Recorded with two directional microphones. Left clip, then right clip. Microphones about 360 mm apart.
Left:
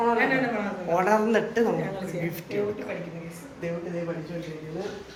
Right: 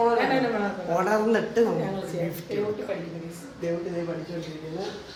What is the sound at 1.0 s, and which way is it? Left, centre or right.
Speech, centre.